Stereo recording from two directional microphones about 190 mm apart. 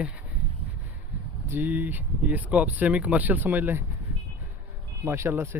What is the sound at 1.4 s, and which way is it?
Speech, 10° right (ahead or behind).